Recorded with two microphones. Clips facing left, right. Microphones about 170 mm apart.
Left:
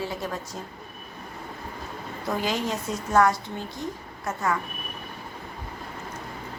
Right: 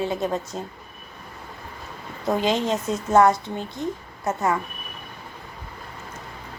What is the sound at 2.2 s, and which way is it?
A woman's voice, 20° right (ahead or behind).